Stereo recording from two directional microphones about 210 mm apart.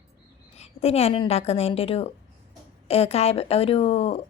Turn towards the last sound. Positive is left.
turn(degrees=25)  # may be behind; listen again after turning